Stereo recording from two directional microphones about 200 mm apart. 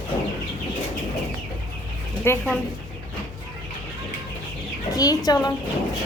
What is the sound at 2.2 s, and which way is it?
Speech, 10° left (ahead or behind).